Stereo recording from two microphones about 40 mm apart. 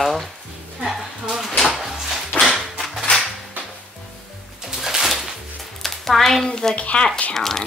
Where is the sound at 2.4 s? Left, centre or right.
Centre.